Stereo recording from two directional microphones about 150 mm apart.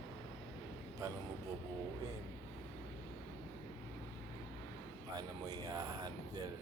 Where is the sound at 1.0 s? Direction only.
20° right (ahead or behind).